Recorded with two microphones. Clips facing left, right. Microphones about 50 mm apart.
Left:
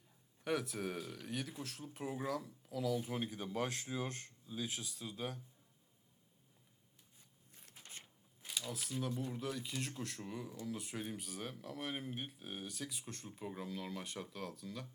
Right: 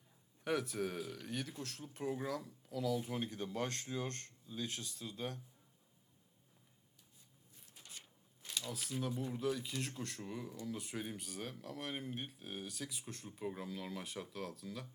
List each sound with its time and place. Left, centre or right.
0.4 s speech: centre
7.8 s a sound: left
8.4 s speech: centre